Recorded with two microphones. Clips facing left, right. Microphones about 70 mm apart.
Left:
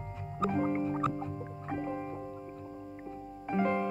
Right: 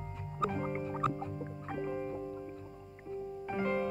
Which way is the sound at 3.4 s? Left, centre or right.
Centre.